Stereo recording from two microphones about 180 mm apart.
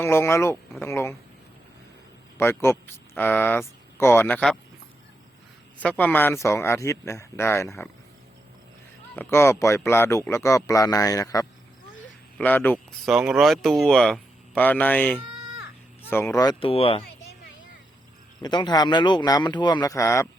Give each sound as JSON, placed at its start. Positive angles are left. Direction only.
{"t": 0.0, "sound": "a man's voice", "side_deg": 15}
{"t": 2.4, "sound": "a man's voice", "side_deg": 15}
{"t": 5.8, "sound": "a man's voice", "side_deg": 10}
{"t": 9.1, "sound": "a man's voice", "side_deg": 15}
{"t": 13.1, "sound": "speech", "side_deg": 0}
{"t": 18.4, "sound": "speech", "side_deg": 25}